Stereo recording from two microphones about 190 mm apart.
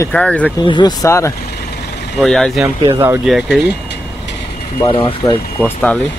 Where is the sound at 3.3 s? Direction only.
5° right (ahead or behind).